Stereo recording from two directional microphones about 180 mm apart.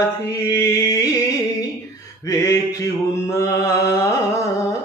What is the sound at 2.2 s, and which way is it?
Mantra, 15° left (ahead or behind).